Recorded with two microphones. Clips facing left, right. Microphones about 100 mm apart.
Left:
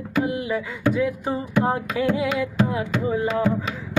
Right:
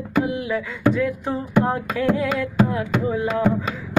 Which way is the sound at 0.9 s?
10° left (ahead or behind).